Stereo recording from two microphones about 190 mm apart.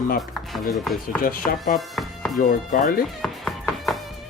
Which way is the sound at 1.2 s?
50° left (ahead or behind).